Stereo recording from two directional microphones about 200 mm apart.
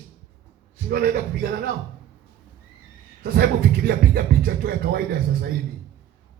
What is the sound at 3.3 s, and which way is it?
Speech, 50° right (ahead or behind).